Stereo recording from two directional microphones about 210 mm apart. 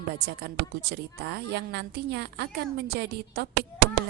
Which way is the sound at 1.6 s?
50° right (ahead or behind).